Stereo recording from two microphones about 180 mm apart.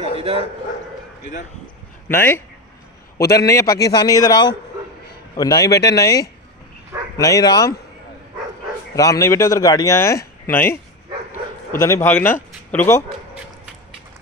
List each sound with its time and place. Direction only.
0.1 s a sound: 30° right (ahead or behind)
2.0 s a man's voice: 15° left (ahead or behind)
8.9 s speech: 20° left (ahead or behind)
11.8 s speech: 15° left (ahead or behind)